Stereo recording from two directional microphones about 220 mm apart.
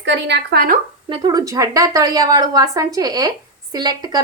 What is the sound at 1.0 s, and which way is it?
A woman's voice, 20° right (ahead or behind).